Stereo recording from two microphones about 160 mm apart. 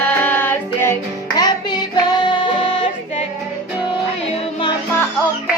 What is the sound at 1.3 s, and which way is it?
Music, 25° left (ahead or behind).